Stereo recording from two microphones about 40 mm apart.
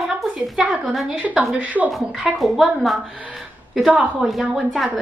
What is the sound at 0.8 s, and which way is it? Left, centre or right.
Speech, centre.